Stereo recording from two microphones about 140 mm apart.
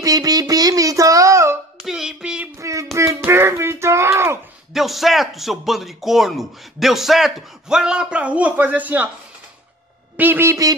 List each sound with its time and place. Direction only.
0.0 s music: 25° right (ahead or behind)
1.8 s music: 5° right (ahead or behind)
2.6 s a sound: 20° right (ahead or behind)
4.7 s speech: centre (ahead or behind)
10.1 s speech: 15° right (ahead or behind)